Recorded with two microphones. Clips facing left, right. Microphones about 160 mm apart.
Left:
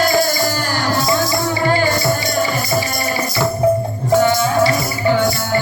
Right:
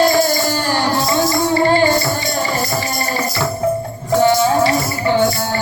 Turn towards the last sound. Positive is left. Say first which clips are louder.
# right 2 dB
turn(degrees=-30)  # may be behind; listen again after turning